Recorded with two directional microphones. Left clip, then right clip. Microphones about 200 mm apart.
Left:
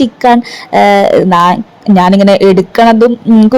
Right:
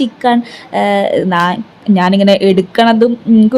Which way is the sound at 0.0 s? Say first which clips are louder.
Left 5 dB; 20° left (ahead or behind).